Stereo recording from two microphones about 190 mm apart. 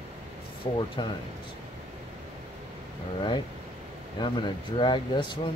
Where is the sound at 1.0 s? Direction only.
25° left (ahead or behind).